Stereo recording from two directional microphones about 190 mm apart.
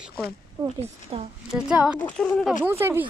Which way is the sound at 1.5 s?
5° right (ahead or behind).